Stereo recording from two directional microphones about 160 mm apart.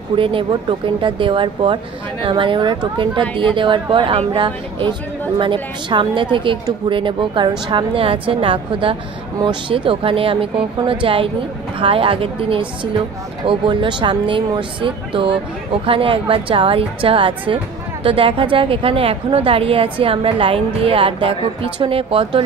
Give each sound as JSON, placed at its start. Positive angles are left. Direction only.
{"t": 0.1, "sound": "a woman's voice", "side_deg": -30}